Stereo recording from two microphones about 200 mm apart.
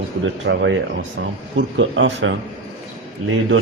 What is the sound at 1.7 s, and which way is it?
Speech, 65° right (ahead or behind).